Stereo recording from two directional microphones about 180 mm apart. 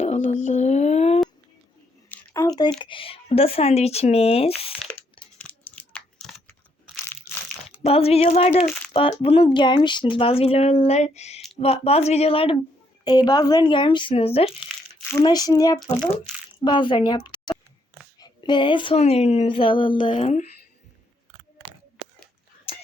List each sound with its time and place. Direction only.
0.0 s a sound: 35° left (ahead or behind)
2.0 s a sound: 15° left (ahead or behind)
2.8 s speech: 30° left (ahead or behind)
4.9 s tearing: 5° left (ahead or behind)
7.9 s a woman's voice: 35° left (ahead or behind)
15.2 s a woman's voice: 20° left (ahead or behind)
22.7 s whispering: 30° left (ahead or behind)